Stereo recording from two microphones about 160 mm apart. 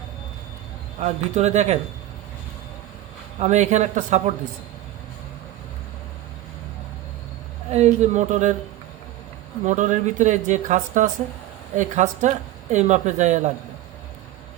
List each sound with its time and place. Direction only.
0.9 s speech: 45° right (ahead or behind)
3.4 s speech: 45° right (ahead or behind)
7.7 s speech: 45° right (ahead or behind)
9.6 s speech: 50° right (ahead or behind)